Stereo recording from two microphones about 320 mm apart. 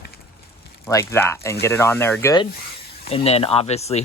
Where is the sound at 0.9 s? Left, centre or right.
Centre.